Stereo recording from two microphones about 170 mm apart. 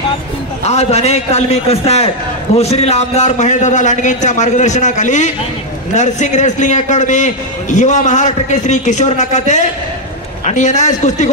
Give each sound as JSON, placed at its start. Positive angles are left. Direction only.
{"t": 0.7, "sound": "a man's voice", "side_deg": 40}